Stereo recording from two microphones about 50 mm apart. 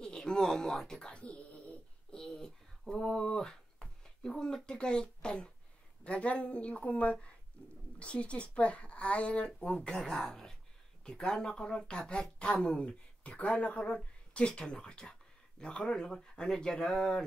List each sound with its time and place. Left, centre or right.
0.0 s speech: centre
1.0 s dog: left
2.1 s speech: centre
3.3 s a sound: centre
4.6 s speech: centre